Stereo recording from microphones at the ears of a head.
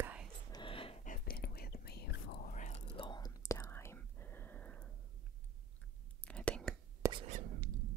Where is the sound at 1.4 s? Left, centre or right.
Left.